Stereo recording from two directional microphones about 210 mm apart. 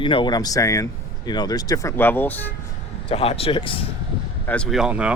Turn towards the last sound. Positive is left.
turn(degrees=-5)  # may be behind; listen again after turning